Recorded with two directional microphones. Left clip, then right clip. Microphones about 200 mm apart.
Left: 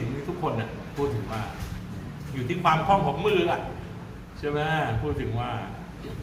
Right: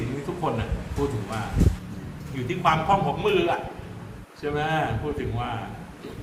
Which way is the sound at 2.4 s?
5° right (ahead or behind).